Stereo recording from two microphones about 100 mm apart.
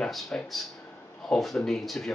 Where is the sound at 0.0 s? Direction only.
5° left (ahead or behind).